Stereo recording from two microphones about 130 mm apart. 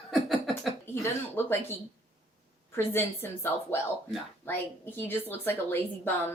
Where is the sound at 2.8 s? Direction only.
15° left (ahead or behind).